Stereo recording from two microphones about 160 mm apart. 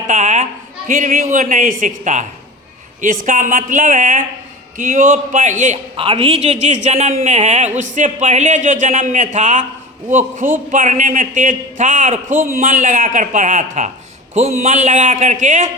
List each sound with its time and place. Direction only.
0.1 s a sound: 45° right (ahead or behind)
0.9 s speech: 55° right (ahead or behind)
6.0 s speech: 35° right (ahead or behind); by 15.7 s 50° right (ahead or behind)